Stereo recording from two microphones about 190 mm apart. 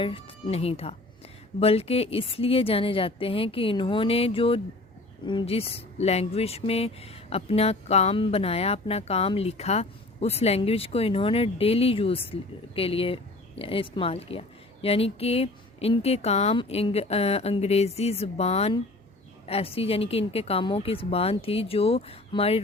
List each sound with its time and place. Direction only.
0.0 s a woman's voice: 25° left (ahead or behind)